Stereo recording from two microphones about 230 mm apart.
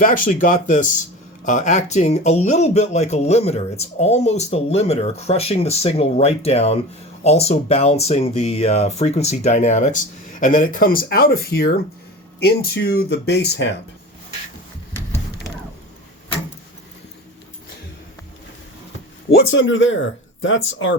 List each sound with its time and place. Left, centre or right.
0.0 s speech: left
19.3 s speech: left